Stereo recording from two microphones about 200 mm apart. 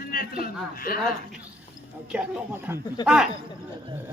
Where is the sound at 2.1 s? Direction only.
10° right (ahead or behind).